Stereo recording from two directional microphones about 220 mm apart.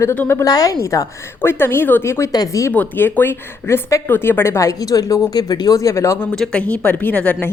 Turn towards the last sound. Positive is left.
turn(degrees=5)  # may be behind; listen again after turning